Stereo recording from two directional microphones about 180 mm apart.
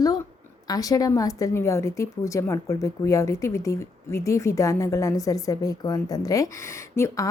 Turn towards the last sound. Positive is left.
turn(degrees=15)  # may be behind; listen again after turning